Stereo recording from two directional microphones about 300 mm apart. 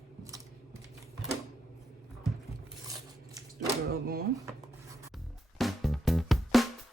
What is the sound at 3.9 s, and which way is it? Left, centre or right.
Speech, right.